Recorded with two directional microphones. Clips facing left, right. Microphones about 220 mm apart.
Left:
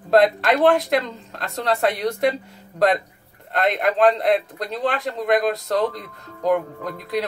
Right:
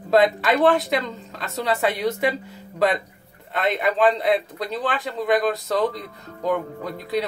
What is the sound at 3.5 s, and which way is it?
A man's voice, centre (ahead or behind).